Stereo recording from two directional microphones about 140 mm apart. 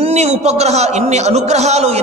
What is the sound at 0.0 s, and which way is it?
A man's voice, 50° right (ahead or behind).